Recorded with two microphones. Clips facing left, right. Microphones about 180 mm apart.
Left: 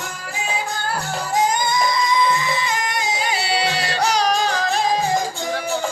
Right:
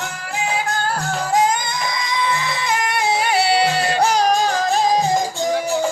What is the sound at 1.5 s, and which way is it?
Music, 60° right (ahead or behind).